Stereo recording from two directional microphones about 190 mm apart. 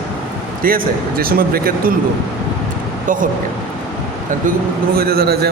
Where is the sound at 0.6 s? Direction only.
50° right (ahead or behind).